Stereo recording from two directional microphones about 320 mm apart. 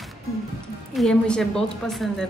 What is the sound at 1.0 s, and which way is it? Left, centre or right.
A woman's voice, centre.